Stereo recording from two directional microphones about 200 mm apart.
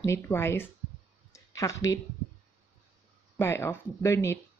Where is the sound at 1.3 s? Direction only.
15° left (ahead or behind).